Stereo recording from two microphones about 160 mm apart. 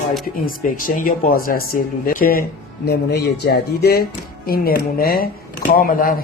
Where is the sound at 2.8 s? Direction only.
90° left.